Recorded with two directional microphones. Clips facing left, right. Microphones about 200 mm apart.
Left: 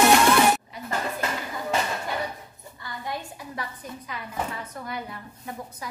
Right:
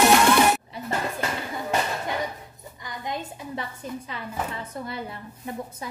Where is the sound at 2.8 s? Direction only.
20° right (ahead or behind).